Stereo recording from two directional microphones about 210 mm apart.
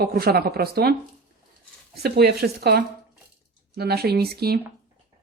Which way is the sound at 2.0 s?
50° right (ahead or behind).